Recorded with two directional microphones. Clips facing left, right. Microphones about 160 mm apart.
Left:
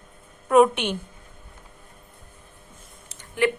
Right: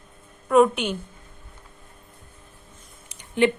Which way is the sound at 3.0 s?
20° right (ahead or behind).